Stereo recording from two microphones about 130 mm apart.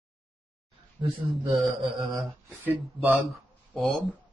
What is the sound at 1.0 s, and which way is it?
Speech, 40° right (ahead or behind).